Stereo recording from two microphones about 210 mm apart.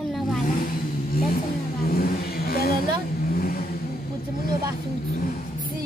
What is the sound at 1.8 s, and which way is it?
Speech, 45° left (ahead or behind).